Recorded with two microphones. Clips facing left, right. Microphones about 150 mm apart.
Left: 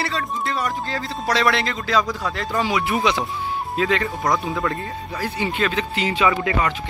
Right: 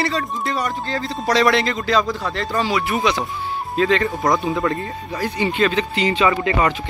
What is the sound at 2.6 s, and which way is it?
Speech, 15° left (ahead or behind).